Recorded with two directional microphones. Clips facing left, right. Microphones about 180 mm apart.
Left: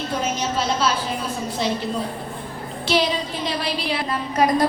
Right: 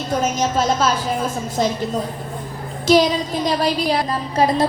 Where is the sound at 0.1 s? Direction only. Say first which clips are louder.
Right 7 dB; 45° right (ahead or behind).